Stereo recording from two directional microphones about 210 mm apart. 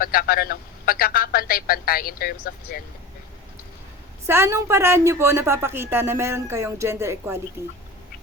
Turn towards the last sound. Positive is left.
turn(degrees=-15)  # may be behind; listen again after turning